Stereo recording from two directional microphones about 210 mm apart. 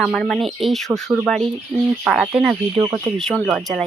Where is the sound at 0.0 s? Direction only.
5° left (ahead or behind).